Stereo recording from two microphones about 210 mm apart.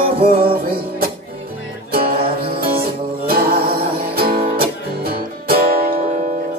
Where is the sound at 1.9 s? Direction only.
45° right (ahead or behind).